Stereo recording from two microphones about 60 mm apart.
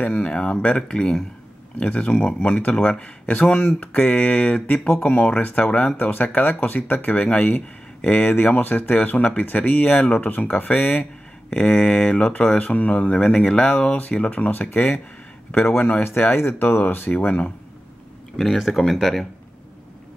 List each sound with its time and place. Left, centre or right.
0.0 s speech: left
5.9 s speech: left
18.3 s speech: centre